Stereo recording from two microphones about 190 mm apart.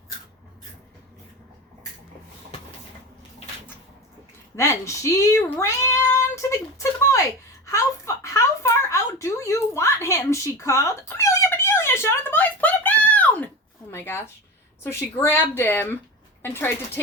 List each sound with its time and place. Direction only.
4.5 s speech: 15° left (ahead or behind)
7.7 s a sound: 15° left (ahead or behind)
13.9 s speech: 10° left (ahead or behind)